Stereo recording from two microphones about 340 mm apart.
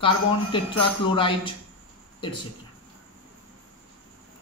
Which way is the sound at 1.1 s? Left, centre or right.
Centre.